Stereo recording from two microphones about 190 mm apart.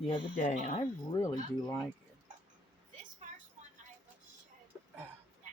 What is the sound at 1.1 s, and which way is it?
Speech, 20° left (ahead or behind).